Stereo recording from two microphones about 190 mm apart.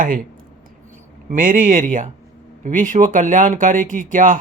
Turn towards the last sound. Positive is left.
turn(degrees=-45)  # may be behind; listen again after turning